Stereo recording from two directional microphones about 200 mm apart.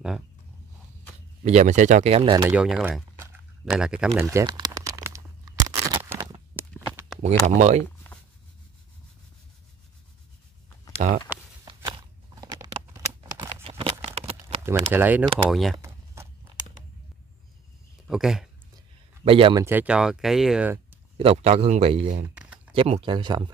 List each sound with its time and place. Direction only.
1.4 s a man's voice: 35° right (ahead or behind)
2.5 s speech: 5° right (ahead or behind)
3.7 s crumpling: 5° right (ahead or behind); by 6.4 s 25° right (ahead or behind)
7.5 s a man's voice: 35° right (ahead or behind)
11.0 s speech: 35° right (ahead or behind)
11.6 s a sound: 20° right (ahead or behind)
14.3 s a sound: 10° right (ahead or behind)
15.3 s speech: centre (ahead or behind)
18.0 s speech: centre (ahead or behind)
19.2 s speech: 25° right (ahead or behind)
19.6 s speech: 10° right (ahead or behind)
21.2 s a man's voice: 30° right (ahead or behind)
22.3 s a sound: 5° right (ahead or behind)
22.7 s speech: 25° right (ahead or behind)